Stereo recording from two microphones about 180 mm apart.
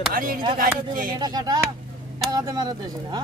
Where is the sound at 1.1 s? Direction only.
20° right (ahead or behind).